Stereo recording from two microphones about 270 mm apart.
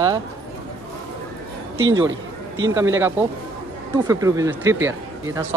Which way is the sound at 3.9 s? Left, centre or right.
Centre.